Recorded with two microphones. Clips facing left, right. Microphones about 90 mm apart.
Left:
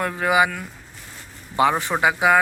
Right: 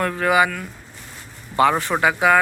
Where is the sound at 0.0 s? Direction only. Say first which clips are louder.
Right 1 dB; 15° left (ahead or behind).